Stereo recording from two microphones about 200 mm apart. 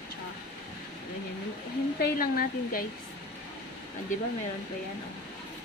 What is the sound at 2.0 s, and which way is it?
Speech, 45° left (ahead or behind).